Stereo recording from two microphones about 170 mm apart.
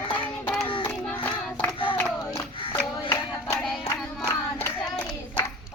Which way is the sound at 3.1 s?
15° left (ahead or behind).